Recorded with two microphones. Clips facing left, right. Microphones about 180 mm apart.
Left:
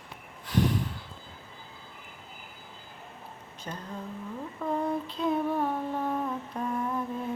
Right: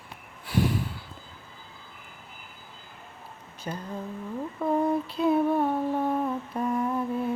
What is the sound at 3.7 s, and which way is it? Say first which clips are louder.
Speech: right 4 dB; 15° right (ahead or behind).